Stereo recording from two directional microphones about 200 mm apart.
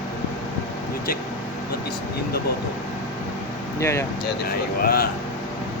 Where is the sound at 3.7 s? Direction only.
15° left (ahead or behind).